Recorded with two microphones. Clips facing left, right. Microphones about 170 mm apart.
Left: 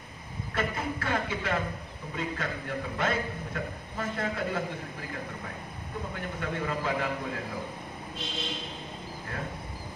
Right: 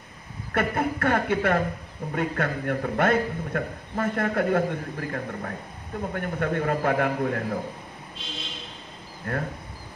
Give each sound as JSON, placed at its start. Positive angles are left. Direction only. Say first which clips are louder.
{"t": 0.5, "sound": "a man's voice", "louder": "right 7 dB", "side_deg": -55}
{"t": 9.3, "sound": "a man's voice", "louder": "right 9 dB", "side_deg": -60}